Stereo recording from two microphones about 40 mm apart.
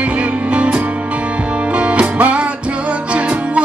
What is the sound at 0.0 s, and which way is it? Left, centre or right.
Music, right.